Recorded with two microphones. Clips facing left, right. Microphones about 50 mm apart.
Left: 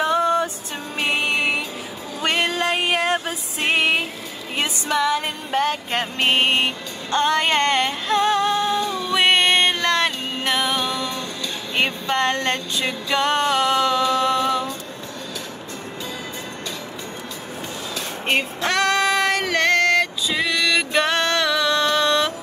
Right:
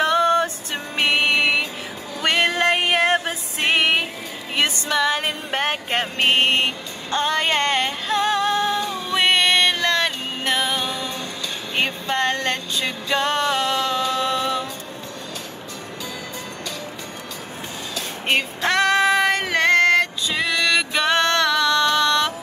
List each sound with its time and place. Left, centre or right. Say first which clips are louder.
0.0 s music: right 1 dB; right
0.9 s a sound: right 3 dB; right
2.2 s music: right 2 dB; right
6.1 s mantra: right 1 dB; right
7.1 s music: left 2 dB; centre
8.5 s music: left 1 dB; right
9.1 s music: left 1 dB; left
10.5 s music: left 1 dB; centre
11.7 s a sound: left 1 dB; left
12.4 s music: left 1 dB; left
18.2 s female singing: right 1 dB; right
19.3 s music: right 1 dB; centre
20.9 s music: even; centre
21.6 s music: right 1 dB; centre